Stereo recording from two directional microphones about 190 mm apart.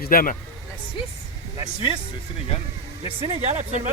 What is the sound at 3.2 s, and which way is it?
Speech, 35° right (ahead or behind).